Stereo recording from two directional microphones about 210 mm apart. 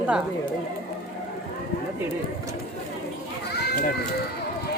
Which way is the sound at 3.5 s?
50° left (ahead or behind).